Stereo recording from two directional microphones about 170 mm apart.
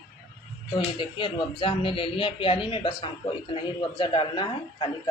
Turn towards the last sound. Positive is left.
turn(degrees=30)  # may be behind; listen again after turning